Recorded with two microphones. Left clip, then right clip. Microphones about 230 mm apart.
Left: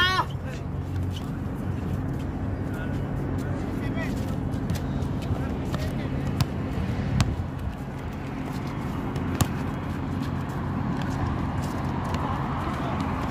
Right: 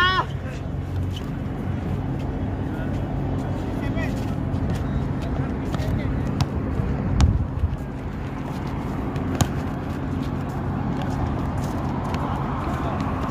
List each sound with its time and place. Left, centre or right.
0.0 s vehicle: left